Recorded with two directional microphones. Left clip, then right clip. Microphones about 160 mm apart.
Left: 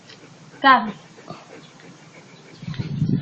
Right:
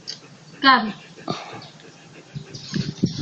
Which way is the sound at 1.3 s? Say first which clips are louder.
Right 10 dB; 25° right (ahead or behind).